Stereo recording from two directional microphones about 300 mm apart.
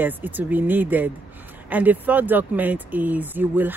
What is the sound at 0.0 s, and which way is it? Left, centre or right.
Speech, centre.